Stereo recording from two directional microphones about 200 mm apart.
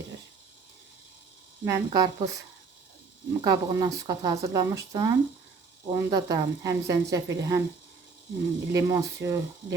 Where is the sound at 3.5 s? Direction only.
20° right (ahead or behind).